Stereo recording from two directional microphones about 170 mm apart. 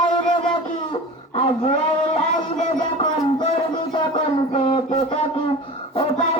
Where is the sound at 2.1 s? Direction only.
40° left (ahead or behind).